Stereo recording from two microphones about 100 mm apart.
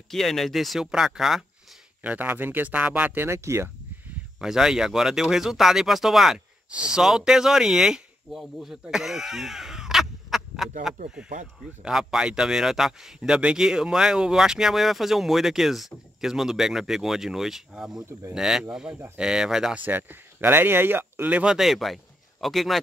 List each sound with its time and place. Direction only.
0.1 s speech: 5° left (ahead or behind)
2.0 s speech: 20° right (ahead or behind)
3.3 s speech: 30° right (ahead or behind)
4.4 s speech: 5° right (ahead or behind)
8.9 s caw: 5° right (ahead or behind)
11.8 s speech: 5° right (ahead or behind)
19.8 s speech: 20° right (ahead or behind)
21.5 s speech: centre (ahead or behind)